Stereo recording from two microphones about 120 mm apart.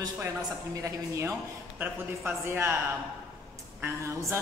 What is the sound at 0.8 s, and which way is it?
Speech, 25° right (ahead or behind).